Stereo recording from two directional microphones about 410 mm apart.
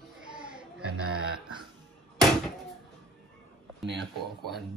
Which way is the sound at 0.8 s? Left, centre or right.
Right.